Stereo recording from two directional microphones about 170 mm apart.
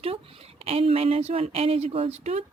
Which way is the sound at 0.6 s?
35° right (ahead or behind).